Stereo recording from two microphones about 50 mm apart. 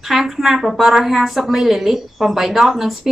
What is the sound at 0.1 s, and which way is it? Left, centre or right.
A woman's voice, centre.